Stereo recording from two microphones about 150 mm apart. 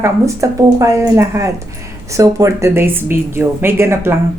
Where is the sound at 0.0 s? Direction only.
20° right (ahead or behind).